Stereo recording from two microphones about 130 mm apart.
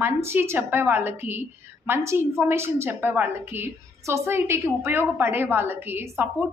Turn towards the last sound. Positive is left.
turn(degrees=-15)  # may be behind; listen again after turning